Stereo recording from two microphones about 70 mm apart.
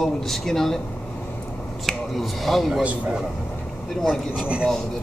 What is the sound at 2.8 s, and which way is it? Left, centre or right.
Speech, centre.